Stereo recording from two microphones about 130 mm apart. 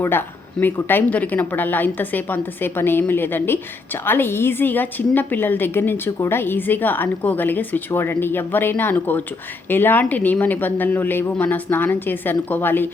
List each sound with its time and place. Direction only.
0.0 s a woman's voice: 15° left (ahead or behind)